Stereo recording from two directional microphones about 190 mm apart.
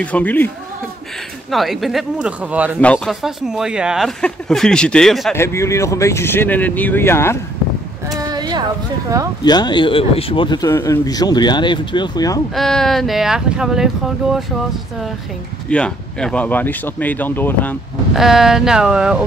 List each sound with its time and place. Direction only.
0.0 s speech: 10° left (ahead or behind)
1.5 s speech: centre (ahead or behind)
2.8 s speech: 5° left (ahead or behind)
5.3 s speech: 15° left (ahead or behind)
8.3 s a sound: 20° right (ahead or behind)
9.4 s speech: 20° left (ahead or behind)
12.5 s speech: centre (ahead or behind)
15.7 s speech: 5° left (ahead or behind)
18.1 s speech: centre (ahead or behind)